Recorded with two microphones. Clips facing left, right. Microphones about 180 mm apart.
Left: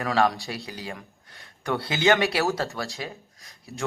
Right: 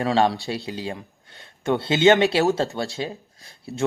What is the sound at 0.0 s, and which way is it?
A man's voice, 25° right (ahead or behind).